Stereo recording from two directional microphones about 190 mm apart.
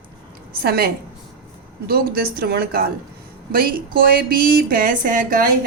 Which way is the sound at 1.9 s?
55° right (ahead or behind).